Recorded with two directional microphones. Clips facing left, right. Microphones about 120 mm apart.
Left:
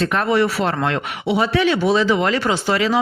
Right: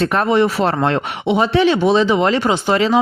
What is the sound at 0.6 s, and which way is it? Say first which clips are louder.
Speech: right 4 dB; 35° right (ahead or behind).